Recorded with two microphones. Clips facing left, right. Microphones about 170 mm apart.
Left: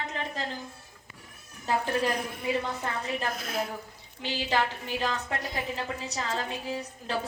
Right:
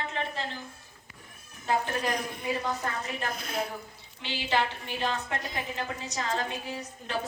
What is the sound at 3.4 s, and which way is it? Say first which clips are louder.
Speech: left 1 dB; centre (ahead or behind).